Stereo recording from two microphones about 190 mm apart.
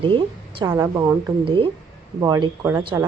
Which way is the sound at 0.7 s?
15° right (ahead or behind).